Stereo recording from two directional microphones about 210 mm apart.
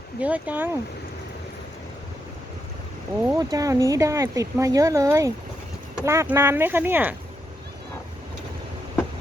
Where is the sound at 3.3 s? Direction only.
15° right (ahead or behind).